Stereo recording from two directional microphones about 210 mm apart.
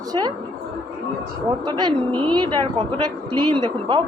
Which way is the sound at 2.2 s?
20° right (ahead or behind).